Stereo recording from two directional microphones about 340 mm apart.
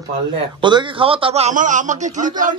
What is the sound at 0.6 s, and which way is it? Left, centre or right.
A man's voice, centre.